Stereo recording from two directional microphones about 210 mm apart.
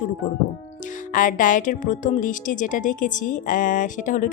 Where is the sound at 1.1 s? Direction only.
40° left (ahead or behind).